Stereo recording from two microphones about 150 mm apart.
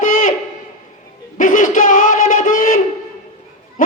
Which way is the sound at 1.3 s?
60° left (ahead or behind).